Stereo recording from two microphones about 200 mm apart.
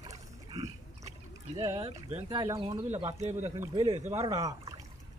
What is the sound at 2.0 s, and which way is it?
Speech, 35° right (ahead or behind).